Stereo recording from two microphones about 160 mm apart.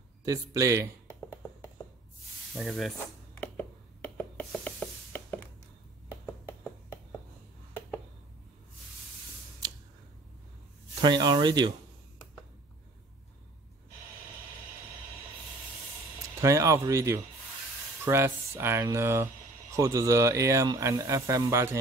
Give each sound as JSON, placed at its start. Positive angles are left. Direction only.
{"t": 0.2, "sound": "speech", "side_deg": -20}
{"t": 2.5, "sound": "speech", "side_deg": 0}
{"t": 3.3, "sound": "a sound", "side_deg": 10}
{"t": 9.6, "sound": "a sound", "side_deg": -25}
{"t": 11.0, "sound": "speech", "side_deg": -25}
{"t": 16.3, "sound": "speech", "side_deg": -20}